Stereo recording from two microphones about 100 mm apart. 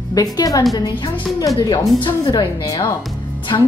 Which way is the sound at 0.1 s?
35° left (ahead or behind).